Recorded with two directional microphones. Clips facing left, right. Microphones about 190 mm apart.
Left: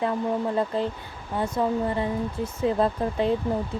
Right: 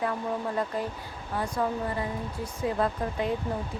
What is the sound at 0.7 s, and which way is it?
Speech, 25° left (ahead or behind).